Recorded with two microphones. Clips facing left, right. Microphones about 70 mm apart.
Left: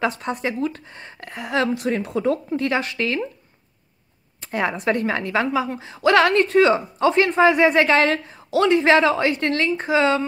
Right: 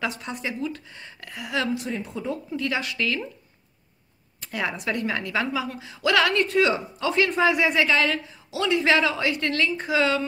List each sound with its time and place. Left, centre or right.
0.0 s a woman's voice: left
1.8 s speech: left
2.5 s a woman's voice: left
4.4 s a woman's voice: left
8.7 s a woman's voice: left